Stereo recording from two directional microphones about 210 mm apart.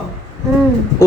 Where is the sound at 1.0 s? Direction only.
15° left (ahead or behind).